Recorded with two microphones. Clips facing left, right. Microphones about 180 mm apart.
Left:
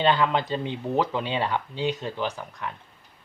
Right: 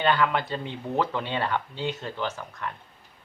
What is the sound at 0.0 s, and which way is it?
Speech, 20° left (ahead or behind).